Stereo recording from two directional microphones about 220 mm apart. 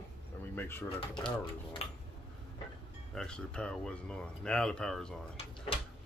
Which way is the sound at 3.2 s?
5° left (ahead or behind).